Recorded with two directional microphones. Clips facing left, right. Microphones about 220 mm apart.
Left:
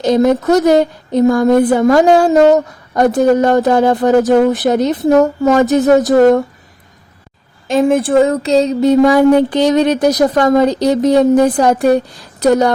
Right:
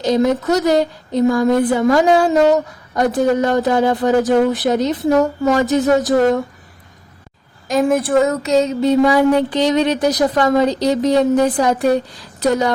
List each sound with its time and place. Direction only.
0.0 s speech: 55° left (ahead or behind)
7.7 s speech: 25° left (ahead or behind); by 12.7 s 45° left (ahead or behind)